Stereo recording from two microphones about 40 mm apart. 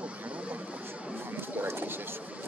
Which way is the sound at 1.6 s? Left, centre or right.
Right.